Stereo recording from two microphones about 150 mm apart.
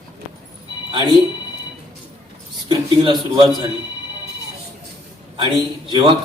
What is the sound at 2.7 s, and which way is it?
Speech, 30° right (ahead or behind).